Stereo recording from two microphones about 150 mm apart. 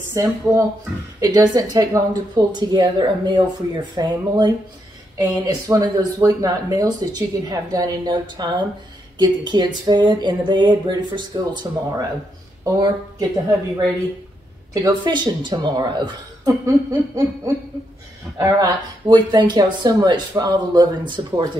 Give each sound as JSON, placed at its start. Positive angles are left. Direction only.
{"t": 0.1, "sound": "speech", "side_deg": -20}
{"t": 14.7, "sound": "speech", "side_deg": -25}
{"t": 18.4, "sound": "speech", "side_deg": -25}